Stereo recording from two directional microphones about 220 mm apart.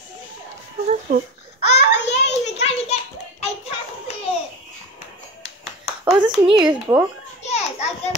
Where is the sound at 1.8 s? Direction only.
50° left (ahead or behind).